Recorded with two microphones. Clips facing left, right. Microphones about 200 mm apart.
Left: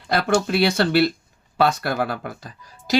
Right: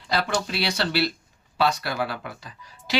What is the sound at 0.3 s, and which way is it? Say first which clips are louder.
Speech: left 8 dB; 50° left (ahead or behind).